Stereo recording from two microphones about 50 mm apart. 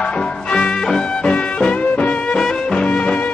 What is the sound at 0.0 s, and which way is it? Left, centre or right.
Music, centre.